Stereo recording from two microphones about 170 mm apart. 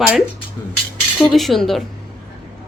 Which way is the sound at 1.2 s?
Centre (ahead or behind).